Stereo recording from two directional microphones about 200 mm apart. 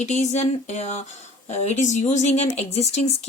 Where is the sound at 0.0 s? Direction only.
35° left (ahead or behind).